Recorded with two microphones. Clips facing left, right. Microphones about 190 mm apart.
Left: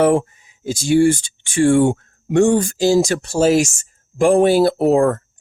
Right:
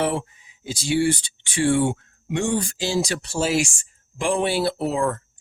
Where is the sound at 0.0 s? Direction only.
50° left (ahead or behind).